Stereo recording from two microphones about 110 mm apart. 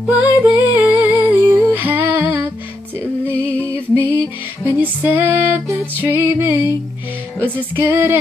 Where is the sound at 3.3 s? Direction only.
15° left (ahead or behind).